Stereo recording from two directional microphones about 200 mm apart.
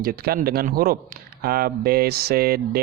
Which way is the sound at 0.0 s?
50° right (ahead or behind).